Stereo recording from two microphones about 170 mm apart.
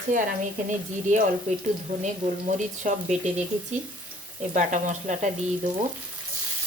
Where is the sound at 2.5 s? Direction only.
45° right (ahead or behind).